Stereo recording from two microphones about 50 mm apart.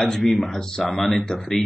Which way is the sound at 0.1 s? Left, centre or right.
Centre.